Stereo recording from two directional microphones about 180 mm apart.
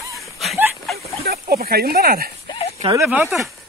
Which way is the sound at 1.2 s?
60° right (ahead or behind).